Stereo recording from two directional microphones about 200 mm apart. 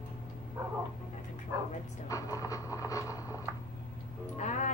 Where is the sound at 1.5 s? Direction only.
15° right (ahead or behind).